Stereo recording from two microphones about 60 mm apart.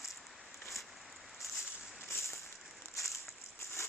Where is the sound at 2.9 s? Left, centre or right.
Left.